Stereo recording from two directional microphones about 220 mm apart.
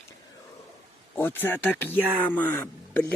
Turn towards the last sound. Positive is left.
turn(degrees=10)  # may be behind; listen again after turning